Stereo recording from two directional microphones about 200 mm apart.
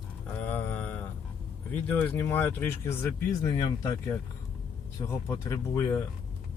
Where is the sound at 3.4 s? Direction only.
25° left (ahead or behind).